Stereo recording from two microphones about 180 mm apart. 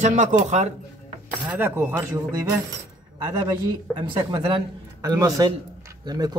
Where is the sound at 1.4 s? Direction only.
10° right (ahead or behind).